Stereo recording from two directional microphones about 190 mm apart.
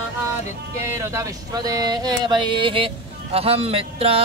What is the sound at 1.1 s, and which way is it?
Music, 20° right (ahead or behind).